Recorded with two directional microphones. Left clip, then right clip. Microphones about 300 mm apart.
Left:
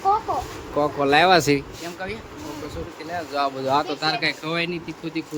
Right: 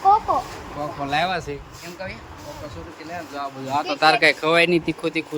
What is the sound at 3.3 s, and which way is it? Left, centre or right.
Speech, left.